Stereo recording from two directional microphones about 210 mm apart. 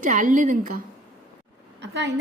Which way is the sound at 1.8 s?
55° right (ahead or behind).